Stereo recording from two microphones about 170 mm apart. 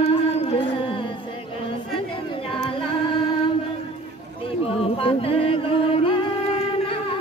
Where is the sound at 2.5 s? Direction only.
30° left (ahead or behind).